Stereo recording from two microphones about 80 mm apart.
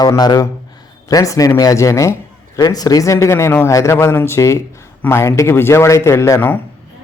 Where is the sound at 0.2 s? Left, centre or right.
Left.